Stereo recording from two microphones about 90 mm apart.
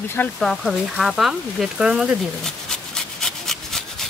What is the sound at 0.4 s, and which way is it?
Speech, centre (ahead or behind).